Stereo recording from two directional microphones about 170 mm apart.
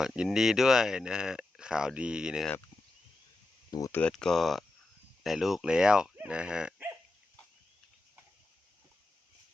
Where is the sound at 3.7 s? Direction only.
20° left (ahead or behind).